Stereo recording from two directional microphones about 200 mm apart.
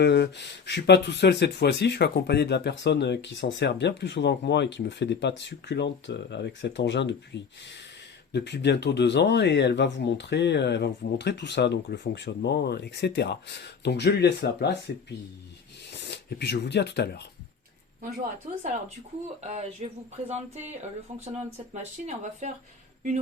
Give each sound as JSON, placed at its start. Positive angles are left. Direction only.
{"t": 0.0, "sound": "speech", "side_deg": 60}
{"t": 15.9, "sound": "speech", "side_deg": 60}
{"t": 19.4, "sound": "speech", "side_deg": -35}